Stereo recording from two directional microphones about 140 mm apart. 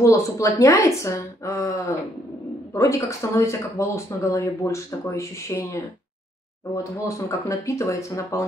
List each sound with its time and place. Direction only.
0.0 s speech: 20° left (ahead or behind)